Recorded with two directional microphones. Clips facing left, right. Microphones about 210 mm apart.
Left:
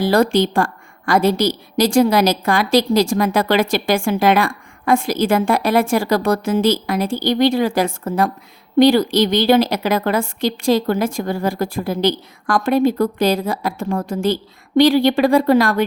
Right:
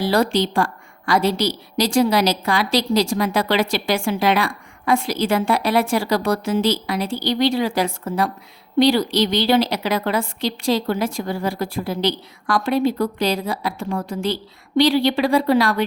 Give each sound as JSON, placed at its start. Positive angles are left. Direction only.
{"t": 0.0, "sound": "a woman's voice", "side_deg": 50}